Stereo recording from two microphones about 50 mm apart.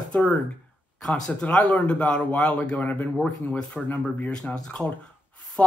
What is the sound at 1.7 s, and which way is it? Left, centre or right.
Speech, left.